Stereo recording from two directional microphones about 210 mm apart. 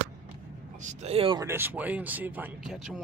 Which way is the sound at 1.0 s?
25° right (ahead or behind).